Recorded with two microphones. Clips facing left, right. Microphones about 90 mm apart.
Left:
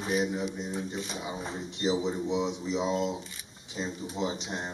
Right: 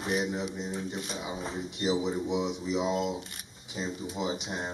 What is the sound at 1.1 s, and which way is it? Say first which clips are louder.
Speech: even; 5° right (ahead or behind).